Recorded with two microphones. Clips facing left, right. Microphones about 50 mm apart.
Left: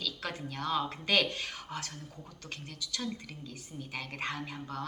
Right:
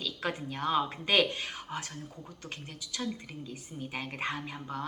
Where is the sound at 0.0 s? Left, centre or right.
Right.